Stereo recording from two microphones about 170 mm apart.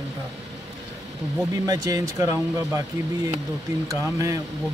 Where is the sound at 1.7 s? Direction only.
20° right (ahead or behind).